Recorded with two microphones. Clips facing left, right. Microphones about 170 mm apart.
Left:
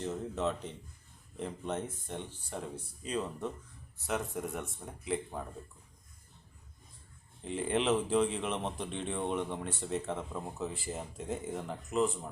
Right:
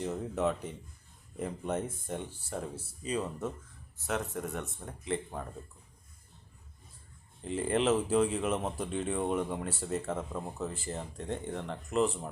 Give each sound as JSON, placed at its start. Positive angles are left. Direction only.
{"t": 0.7, "sound": "speech", "side_deg": -10}
{"t": 7.4, "sound": "speech", "side_deg": 0}